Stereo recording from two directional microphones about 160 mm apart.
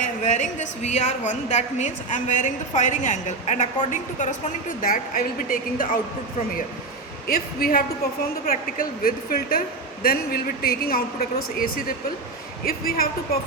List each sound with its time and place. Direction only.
0.0 s a woman's voice: 50° left (ahead or behind)
7.3 s speech: 65° left (ahead or behind)